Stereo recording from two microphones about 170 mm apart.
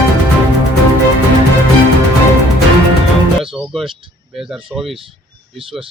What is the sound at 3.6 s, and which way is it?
Speech, centre (ahead or behind).